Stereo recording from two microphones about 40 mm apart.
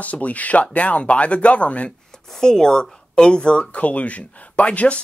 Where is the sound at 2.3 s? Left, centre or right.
Centre.